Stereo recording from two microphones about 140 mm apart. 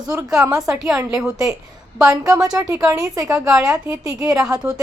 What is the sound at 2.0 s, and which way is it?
A woman's voice, 25° right (ahead or behind).